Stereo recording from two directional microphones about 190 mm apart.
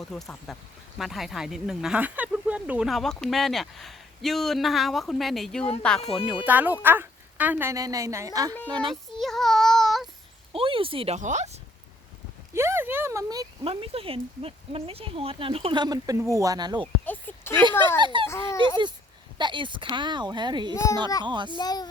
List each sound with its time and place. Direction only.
0.1 s speech: centre (ahead or behind)
6.0 s speech: 30° left (ahead or behind)
6.4 s speech: 10° right (ahead or behind)
8.5 s speech: 10° left (ahead or behind)
8.9 s child singing: centre (ahead or behind)
10.5 s speech: 30° right (ahead or behind)
12.5 s speech: 15° right (ahead or behind)
17.1 s speech: 10° left (ahead or behind)
18.0 s speech: 25° right (ahead or behind)
18.3 s speech: 15° left (ahead or behind)
19.4 s speech: 25° right (ahead or behind)
21.6 s a child's voice: 20° left (ahead or behind)